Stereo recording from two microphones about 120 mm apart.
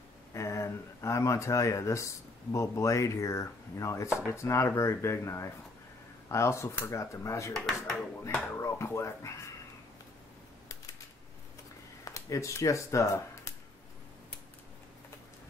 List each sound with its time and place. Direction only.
0.3 s speech: 25° left (ahead or behind)
2.5 s chopping: 25° left (ahead or behind)
7.5 s speech: 5° left (ahead or behind)
8.5 s chopping: 20° left (ahead or behind)
12.0 s speech: 25° left (ahead or behind)